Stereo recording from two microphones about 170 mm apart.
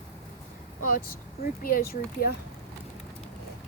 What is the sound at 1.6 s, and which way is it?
Speech, 60° left (ahead or behind).